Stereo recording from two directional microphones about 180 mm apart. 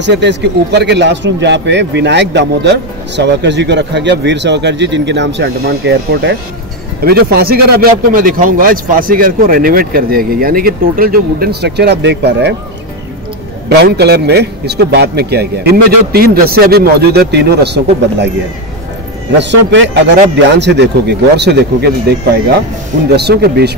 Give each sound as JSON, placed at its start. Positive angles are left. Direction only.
{"t": 0.0, "sound": "a man's voice", "side_deg": -75}
{"t": 13.7, "sound": "speech", "side_deg": -65}
{"t": 19.3, "sound": "a man's voice", "side_deg": -75}